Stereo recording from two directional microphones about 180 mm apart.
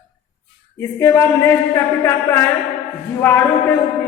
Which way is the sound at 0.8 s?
15° left (ahead or behind).